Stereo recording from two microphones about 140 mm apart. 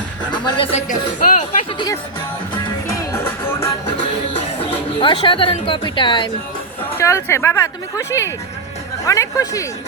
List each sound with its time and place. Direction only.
0.3 s music: 35° left (ahead or behind)
0.8 s speech: 65° left (ahead or behind)
3.1 s music: 15° left (ahead or behind)
4.6 s speech: 40° left (ahead or behind)
6.9 s a woman's voice: 20° left (ahead or behind)